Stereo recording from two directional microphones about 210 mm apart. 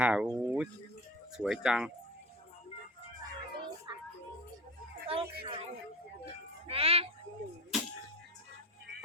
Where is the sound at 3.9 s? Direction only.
20° right (ahead or behind).